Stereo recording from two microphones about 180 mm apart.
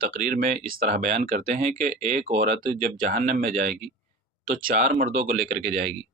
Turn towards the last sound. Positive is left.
turn(degrees=-45)  # may be behind; listen again after turning